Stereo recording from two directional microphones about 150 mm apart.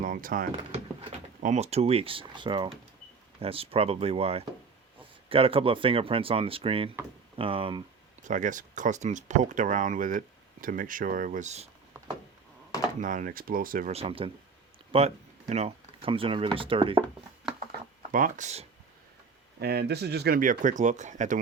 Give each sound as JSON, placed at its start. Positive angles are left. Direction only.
{"t": 0.0, "sound": "speech", "side_deg": -65}
{"t": 1.4, "sound": "speech", "side_deg": -50}
{"t": 8.3, "sound": "speech", "side_deg": -60}
{"t": 13.0, "sound": "speech", "side_deg": -60}
{"t": 13.9, "sound": "speech", "side_deg": -40}
{"t": 18.1, "sound": "speech", "side_deg": -60}
{"t": 19.5, "sound": "speech", "side_deg": -90}